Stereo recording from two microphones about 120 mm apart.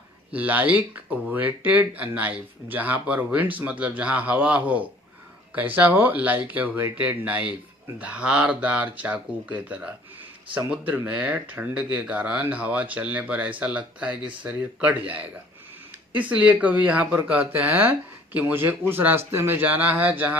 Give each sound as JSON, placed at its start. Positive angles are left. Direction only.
{"t": 0.3, "sound": "speech", "side_deg": -15}
{"t": 16.1, "sound": "speech", "side_deg": -15}